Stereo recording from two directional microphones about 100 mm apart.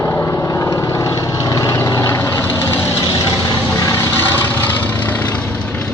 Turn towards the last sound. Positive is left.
turn(degrees=10)  # may be behind; listen again after turning